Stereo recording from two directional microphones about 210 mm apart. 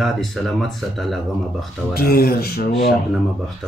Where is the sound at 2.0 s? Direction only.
45° left (ahead or behind).